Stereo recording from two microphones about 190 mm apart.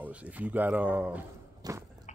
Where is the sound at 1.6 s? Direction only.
20° right (ahead or behind).